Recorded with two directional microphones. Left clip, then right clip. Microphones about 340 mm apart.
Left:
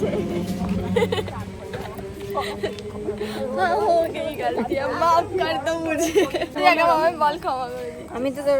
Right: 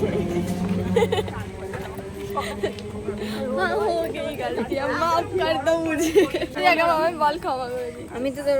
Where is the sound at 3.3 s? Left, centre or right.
Centre.